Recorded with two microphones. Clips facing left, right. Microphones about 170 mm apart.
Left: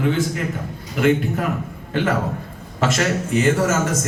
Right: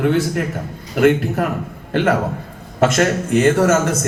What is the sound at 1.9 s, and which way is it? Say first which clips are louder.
Speech: right 4 dB; 70° right (ahead or behind).